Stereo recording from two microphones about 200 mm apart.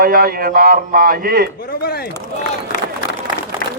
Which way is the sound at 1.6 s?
50° left (ahead or behind).